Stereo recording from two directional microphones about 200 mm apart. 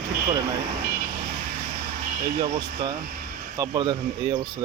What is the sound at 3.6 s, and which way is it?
Speech, 20° right (ahead or behind).